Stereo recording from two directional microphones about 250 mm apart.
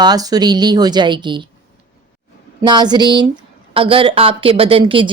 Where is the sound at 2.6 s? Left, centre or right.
Centre.